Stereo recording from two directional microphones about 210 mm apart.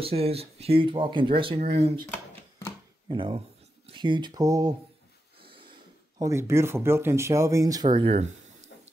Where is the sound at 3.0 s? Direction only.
25° right (ahead or behind).